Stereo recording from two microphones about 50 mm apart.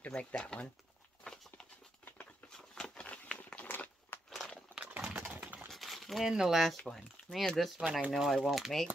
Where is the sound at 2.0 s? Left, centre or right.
Left.